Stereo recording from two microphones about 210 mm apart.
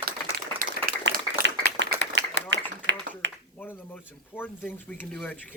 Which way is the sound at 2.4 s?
60° left (ahead or behind).